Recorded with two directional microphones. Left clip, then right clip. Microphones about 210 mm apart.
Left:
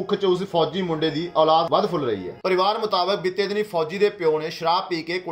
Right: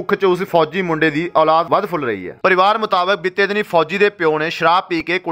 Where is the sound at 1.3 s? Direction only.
55° right (ahead or behind).